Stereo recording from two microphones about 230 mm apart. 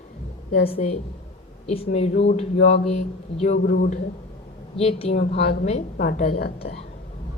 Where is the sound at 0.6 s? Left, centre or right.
Left.